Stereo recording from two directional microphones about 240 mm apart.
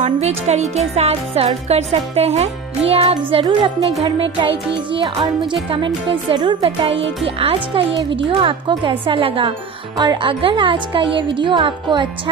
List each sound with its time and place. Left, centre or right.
0.0 s music: right